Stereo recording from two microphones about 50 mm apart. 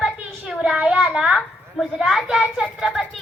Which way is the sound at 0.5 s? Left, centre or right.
Centre.